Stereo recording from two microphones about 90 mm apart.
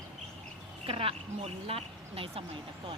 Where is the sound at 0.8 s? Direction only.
90° right.